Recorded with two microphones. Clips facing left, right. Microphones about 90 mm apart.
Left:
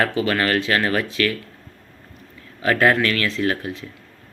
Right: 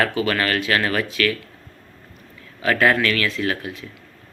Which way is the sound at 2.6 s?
20° left (ahead or behind).